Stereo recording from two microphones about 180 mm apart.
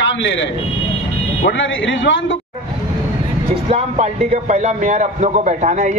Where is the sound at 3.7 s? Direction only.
35° right (ahead or behind).